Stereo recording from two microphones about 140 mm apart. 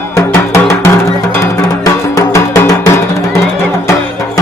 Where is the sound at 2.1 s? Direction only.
25° left (ahead or behind).